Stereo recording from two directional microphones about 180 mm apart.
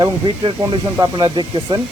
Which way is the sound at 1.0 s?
25° right (ahead or behind).